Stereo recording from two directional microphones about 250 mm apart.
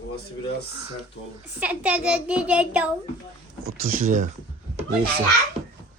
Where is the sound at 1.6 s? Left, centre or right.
Centre.